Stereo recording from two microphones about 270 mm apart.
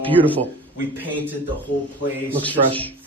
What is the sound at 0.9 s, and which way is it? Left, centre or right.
Speech, centre.